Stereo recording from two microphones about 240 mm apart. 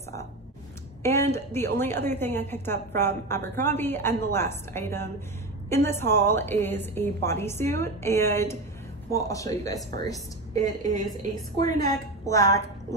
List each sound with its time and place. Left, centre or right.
1.0 s a woman's voice: centre
10.8 s a woman's voice: right
11.8 s a woman's voice: centre